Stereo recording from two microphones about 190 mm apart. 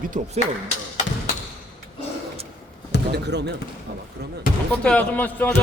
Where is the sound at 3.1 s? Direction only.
65° right (ahead or behind).